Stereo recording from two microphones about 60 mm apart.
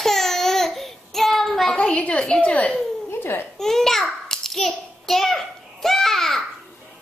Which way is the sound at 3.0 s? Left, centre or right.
Left.